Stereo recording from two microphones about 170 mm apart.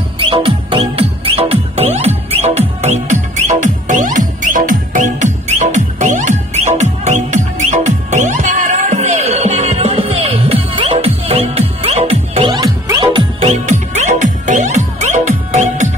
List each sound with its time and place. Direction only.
0.2 s music: 30° right (ahead or behind)
13.5 s music: 45° right (ahead or behind)